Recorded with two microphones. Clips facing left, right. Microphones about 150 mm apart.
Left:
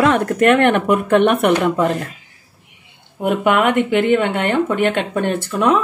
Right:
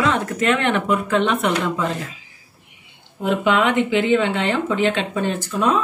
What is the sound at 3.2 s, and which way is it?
Speech, 55° left (ahead or behind).